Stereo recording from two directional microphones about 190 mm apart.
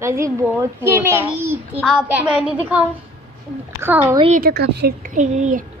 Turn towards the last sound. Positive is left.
turn(degrees=-40)  # may be behind; listen again after turning